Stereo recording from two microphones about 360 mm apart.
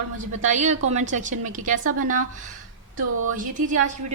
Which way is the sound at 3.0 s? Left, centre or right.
Right.